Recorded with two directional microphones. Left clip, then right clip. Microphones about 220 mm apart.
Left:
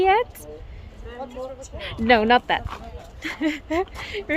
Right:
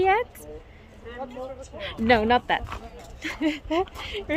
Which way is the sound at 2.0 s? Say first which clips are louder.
Left 3 dB; 5° left (ahead or behind).